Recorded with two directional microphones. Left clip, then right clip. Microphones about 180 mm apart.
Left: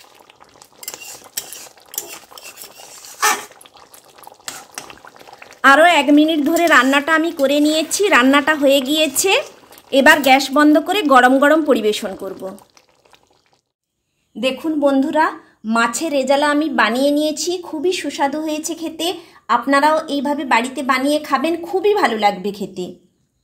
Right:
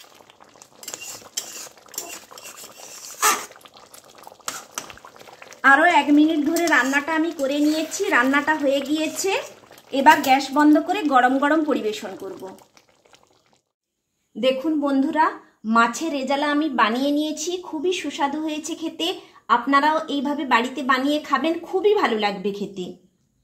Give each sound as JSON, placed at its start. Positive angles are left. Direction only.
{"t": 0.9, "sound": "stir", "side_deg": 10}
{"t": 4.8, "sound": "boiling", "side_deg": 5}
{"t": 5.6, "sound": "speech", "side_deg": 45}
{"t": 9.8, "sound": "a woman's voice", "side_deg": 50}
{"t": 14.4, "sound": "a woman's voice", "side_deg": 35}